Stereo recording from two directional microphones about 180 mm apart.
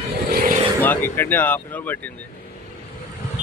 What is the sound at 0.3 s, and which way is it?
Vehicle, 55° right (ahead or behind).